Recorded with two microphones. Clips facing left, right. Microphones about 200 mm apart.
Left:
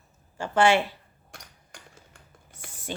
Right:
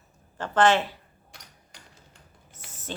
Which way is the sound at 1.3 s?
50° left (ahead or behind).